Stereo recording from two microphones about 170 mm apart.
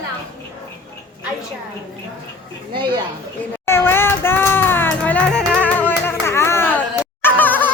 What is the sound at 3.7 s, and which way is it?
Music, 15° left (ahead or behind).